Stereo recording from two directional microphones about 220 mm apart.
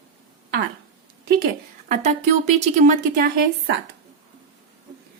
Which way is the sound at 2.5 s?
30° right (ahead or behind).